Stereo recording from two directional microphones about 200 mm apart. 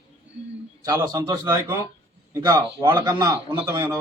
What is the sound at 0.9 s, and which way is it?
A man's voice, 20° right (ahead or behind).